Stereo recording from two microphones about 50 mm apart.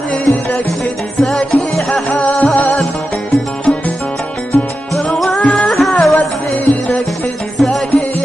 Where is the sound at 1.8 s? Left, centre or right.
Centre.